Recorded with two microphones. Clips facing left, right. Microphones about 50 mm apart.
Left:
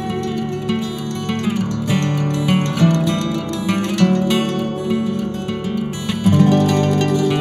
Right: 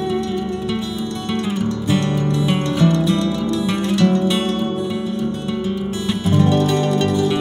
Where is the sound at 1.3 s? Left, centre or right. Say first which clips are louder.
Even; left.